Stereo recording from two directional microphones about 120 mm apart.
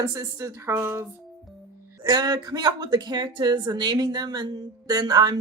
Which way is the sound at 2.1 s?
35° right (ahead or behind).